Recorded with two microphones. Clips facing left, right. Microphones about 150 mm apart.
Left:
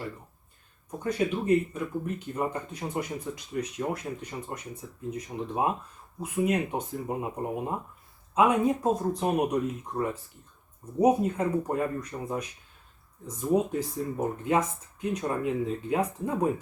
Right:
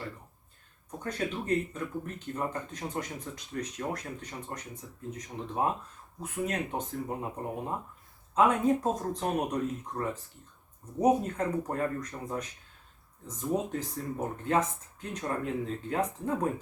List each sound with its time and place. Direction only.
0.9 s speech: 10° left (ahead or behind)